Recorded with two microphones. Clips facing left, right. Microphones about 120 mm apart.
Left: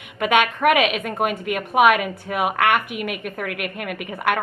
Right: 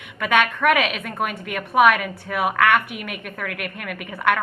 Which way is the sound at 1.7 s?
15° left (ahead or behind).